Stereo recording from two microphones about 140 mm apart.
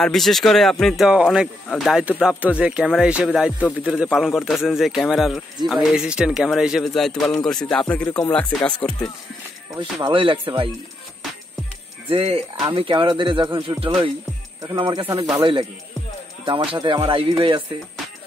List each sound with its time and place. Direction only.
0.0 s speech: centre (ahead or behind)
9.8 s speech: 35° right (ahead or behind)
12.1 s speech: 45° right (ahead or behind)
16.4 s speech: 35° right (ahead or behind)